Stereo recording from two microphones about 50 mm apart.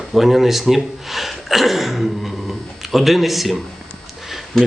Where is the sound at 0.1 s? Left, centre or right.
Centre.